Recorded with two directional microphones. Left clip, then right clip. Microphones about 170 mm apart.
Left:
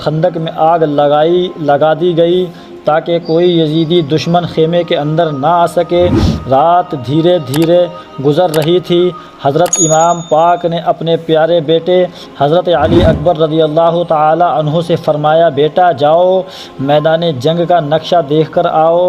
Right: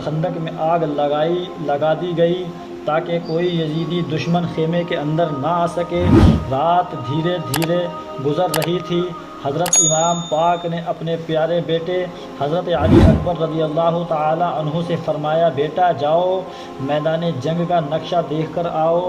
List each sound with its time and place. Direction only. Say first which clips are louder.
0.0 s a man's voice: left 10 dB; 55° left (ahead or behind)
6.1 s speech: left 1 dB; centre (ahead or behind)
6.5 s a man's voice: left 12 dB; 55° left (ahead or behind)
7.6 s speech: left 10 dB; centre (ahead or behind)
8.7 s a man's voice: left 11 dB; 55° left (ahead or behind)